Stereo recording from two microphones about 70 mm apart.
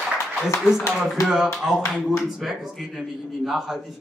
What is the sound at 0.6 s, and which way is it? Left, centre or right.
Speech, centre.